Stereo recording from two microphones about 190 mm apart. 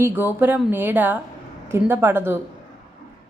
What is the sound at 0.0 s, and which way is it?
Speech, 10° right (ahead or behind).